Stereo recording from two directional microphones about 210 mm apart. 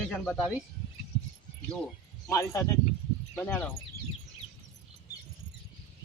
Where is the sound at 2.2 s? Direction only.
15° left (ahead or behind).